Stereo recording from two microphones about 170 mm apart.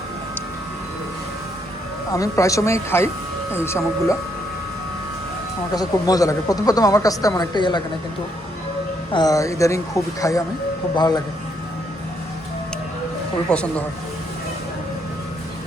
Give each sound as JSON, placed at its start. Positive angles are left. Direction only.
{"t": 2.1, "sound": "speech", "side_deg": 20}
{"t": 5.7, "sound": "a woman's voice", "side_deg": 20}
{"t": 9.1, "sound": "a woman's voice", "side_deg": 20}
{"t": 13.5, "sound": "speech", "side_deg": 5}